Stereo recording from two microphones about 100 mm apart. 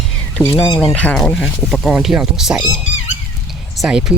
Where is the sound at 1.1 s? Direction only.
5° left (ahead or behind).